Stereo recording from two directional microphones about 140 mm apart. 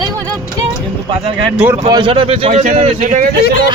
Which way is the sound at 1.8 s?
35° right (ahead or behind).